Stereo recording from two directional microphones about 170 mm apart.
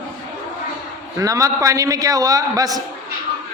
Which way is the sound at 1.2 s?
20° right (ahead or behind).